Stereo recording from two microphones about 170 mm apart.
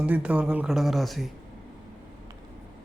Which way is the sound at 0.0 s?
10° right (ahead or behind).